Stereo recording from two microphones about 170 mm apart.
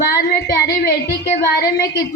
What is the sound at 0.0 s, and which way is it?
Child singing, 65° left (ahead or behind).